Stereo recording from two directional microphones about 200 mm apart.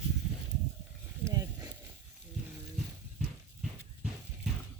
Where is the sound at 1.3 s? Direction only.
15° right (ahead or behind).